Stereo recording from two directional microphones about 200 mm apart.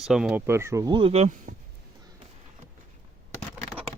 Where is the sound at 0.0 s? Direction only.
5° right (ahead or behind); by 1.5 s 35° right (ahead or behind).